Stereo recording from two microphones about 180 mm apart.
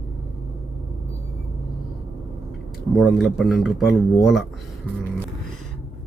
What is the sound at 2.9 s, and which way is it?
A man's voice, centre (ahead or behind).